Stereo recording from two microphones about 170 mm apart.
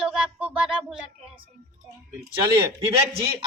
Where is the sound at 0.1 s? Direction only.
10° right (ahead or behind).